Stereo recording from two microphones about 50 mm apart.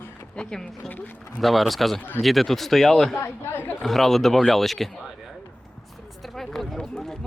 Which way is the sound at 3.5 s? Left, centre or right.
Left.